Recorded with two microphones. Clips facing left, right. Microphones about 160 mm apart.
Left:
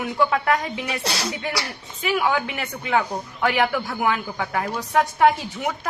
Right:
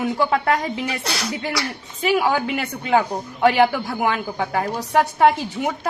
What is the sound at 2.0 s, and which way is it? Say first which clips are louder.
A woman's voice: right 3 dB; 35° right (ahead or behind).